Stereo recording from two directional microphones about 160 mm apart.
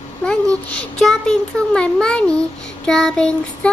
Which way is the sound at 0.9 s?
5° left (ahead or behind).